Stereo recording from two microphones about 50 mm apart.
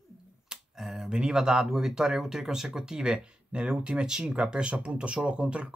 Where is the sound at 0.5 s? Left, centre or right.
Centre.